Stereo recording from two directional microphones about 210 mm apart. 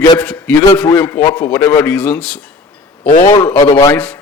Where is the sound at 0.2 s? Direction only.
5° left (ahead or behind).